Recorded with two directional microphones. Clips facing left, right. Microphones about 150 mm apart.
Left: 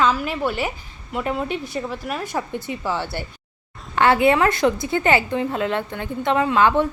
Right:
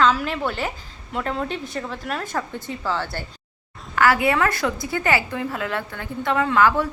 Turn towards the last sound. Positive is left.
turn(degrees=20)  # may be behind; listen again after turning